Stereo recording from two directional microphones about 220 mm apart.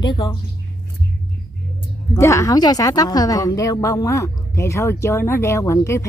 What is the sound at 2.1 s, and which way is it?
A woman's voice, 15° left (ahead or behind).